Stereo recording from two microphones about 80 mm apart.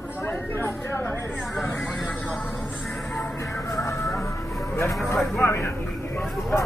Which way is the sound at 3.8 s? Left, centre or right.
Left.